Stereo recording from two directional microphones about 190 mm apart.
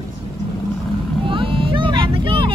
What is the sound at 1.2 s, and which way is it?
Vehicle, 25° right (ahead or behind).